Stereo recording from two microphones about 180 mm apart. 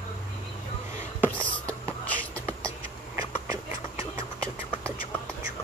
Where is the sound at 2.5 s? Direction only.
15° right (ahead or behind).